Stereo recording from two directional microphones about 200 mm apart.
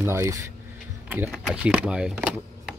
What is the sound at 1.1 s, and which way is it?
Speech, 5° right (ahead or behind).